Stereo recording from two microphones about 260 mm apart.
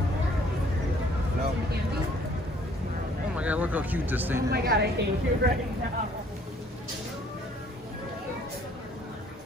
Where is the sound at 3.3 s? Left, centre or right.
Centre.